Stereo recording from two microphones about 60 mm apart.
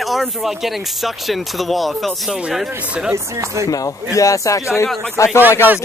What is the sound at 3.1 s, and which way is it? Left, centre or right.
Speech, right.